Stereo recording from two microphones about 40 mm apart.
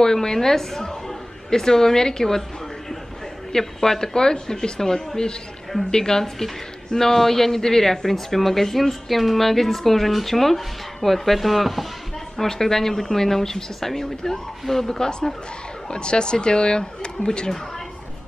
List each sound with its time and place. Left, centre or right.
0.0 s a woman's voice: centre
3.5 s speech: centre
12.4 s speech: centre